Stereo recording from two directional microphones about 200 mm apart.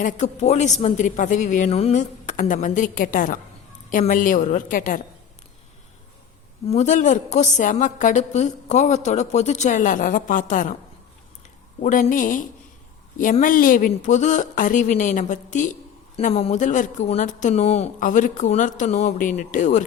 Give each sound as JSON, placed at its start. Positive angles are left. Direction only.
{"t": 0.0, "sound": "speech", "side_deg": 40}
{"t": 6.7, "sound": "speech", "side_deg": 35}
{"t": 11.8, "sound": "a woman's voice", "side_deg": 45}